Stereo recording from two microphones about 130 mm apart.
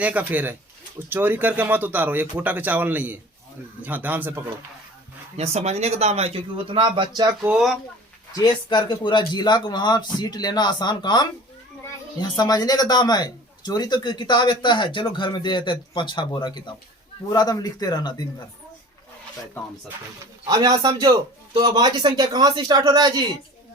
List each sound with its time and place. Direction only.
0.0 s speech: 10° right (ahead or behind)
5.4 s speech: 55° right (ahead or behind); by 7.3 s 30° right (ahead or behind)
7.4 s speech: 5° right (ahead or behind)
8.7 s a man's voice: 35° left (ahead or behind)
20.5 s a man's voice: 30° right (ahead or behind)